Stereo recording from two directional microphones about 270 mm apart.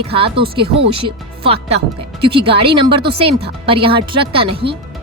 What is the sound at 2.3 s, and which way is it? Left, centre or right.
Speech, centre.